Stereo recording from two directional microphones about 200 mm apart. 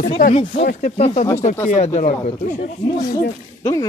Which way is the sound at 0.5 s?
50° left (ahead or behind).